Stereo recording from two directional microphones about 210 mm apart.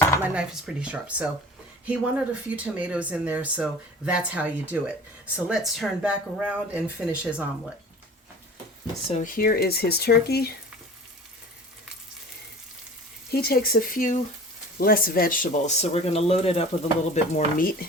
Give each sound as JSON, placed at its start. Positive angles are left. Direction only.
{"t": 0.2, "sound": "speech", "side_deg": -5}
{"t": 9.0, "sound": "speech", "side_deg": 35}
{"t": 13.3, "sound": "speech", "side_deg": 45}
{"t": 17.3, "sound": "speech", "side_deg": 45}